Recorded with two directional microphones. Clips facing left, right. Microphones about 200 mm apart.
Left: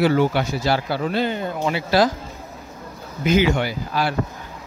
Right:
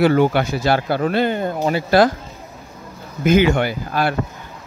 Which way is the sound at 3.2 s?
55° right (ahead or behind).